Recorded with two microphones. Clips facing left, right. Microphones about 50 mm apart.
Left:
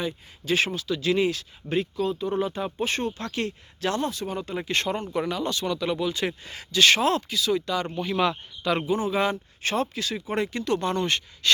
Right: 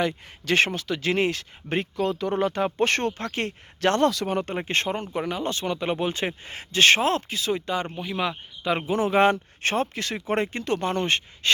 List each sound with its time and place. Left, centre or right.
0.0 s speech: right
3.2 s speech: right
4.0 s speech: right
4.3 s speech: right
7.9 s speech: centre
8.6 s a man's voice: right
9.0 s speech: right